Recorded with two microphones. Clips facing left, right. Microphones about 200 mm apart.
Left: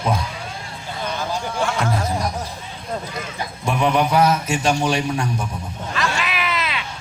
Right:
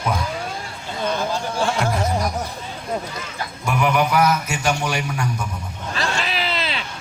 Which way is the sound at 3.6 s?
30° left (ahead or behind).